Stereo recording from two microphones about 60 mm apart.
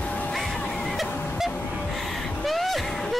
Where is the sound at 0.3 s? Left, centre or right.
Centre.